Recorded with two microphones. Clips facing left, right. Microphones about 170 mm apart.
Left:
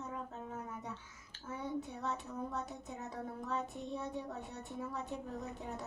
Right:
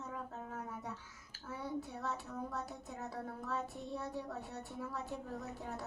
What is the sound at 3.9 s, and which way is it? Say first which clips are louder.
A woman's voice: left 1 dB; 20° left (ahead or behind).